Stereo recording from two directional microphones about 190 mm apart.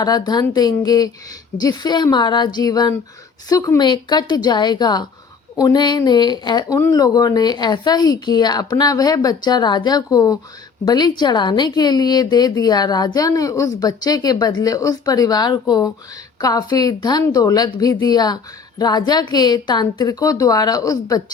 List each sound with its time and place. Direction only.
0.0 s speech: 20° left (ahead or behind)